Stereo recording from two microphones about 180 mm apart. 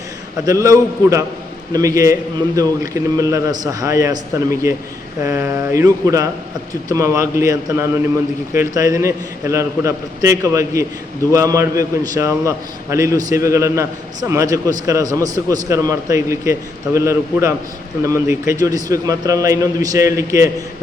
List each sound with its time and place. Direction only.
0.4 s a man's voice: 20° right (ahead or behind)
5.2 s a man's voice: 15° right (ahead or behind)